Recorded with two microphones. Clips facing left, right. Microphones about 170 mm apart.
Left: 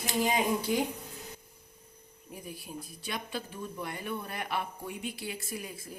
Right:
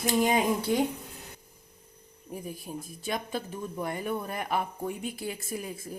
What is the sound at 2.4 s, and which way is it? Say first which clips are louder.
A woman's voice: right 1 dB; 45° right (ahead or behind).